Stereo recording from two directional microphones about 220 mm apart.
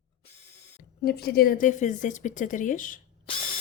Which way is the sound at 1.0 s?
45° left (ahead or behind).